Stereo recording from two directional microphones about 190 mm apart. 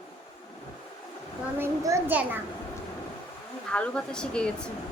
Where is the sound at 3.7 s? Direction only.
5° left (ahead or behind).